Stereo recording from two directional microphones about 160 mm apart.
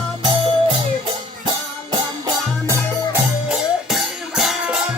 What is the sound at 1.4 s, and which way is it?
Music, 25° right (ahead or behind).